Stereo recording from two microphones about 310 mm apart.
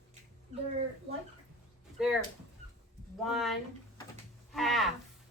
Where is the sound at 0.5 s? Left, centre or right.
Right.